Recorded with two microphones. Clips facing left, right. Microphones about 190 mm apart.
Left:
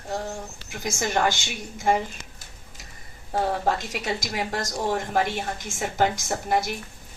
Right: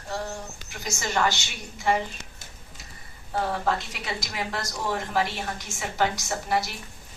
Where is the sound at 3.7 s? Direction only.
45° left (ahead or behind).